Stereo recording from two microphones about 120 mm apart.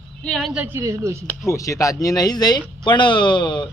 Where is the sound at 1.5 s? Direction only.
25° left (ahead or behind).